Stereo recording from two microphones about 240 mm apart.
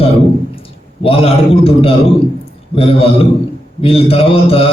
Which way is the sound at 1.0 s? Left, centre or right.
Left.